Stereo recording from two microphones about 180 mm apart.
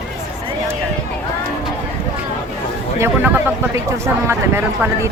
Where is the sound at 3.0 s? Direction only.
15° right (ahead or behind).